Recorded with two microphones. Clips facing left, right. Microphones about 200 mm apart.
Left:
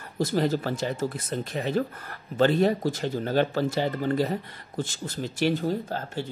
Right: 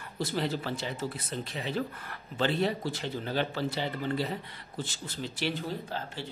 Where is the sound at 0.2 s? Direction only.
45° left (ahead or behind).